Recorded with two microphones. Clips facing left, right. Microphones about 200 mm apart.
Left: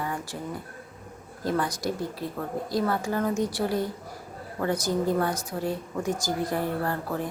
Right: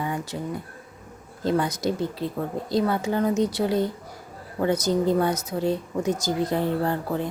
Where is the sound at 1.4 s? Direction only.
20° right (ahead or behind).